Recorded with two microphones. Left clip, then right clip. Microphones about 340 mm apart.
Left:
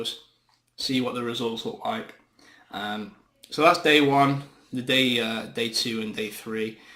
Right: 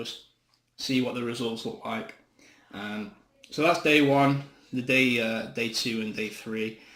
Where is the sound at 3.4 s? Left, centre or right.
Left.